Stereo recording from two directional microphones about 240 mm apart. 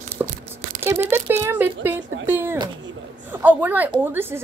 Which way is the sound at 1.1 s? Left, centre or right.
Centre.